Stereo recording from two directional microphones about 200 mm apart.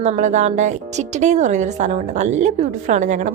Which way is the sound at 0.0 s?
35° right (ahead or behind).